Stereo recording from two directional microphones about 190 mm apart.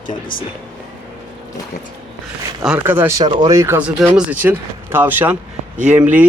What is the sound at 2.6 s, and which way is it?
Speech, 10° right (ahead or behind).